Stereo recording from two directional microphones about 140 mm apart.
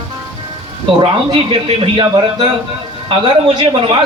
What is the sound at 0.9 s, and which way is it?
A man's voice, 40° right (ahead or behind).